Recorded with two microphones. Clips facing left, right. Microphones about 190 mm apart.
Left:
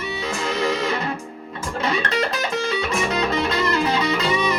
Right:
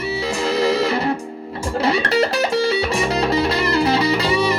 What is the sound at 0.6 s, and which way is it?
Music, 35° right (ahead or behind).